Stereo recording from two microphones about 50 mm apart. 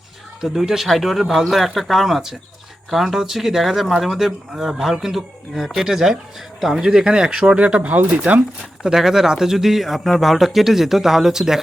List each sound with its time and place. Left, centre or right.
0.4 s speech: centre; by 8.4 s right
8.8 s speech: centre